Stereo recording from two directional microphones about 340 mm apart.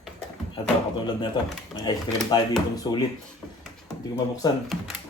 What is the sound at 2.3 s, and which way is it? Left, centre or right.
Speech, centre.